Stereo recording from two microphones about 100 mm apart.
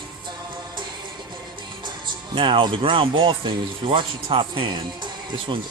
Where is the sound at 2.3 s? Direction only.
60° right (ahead or behind).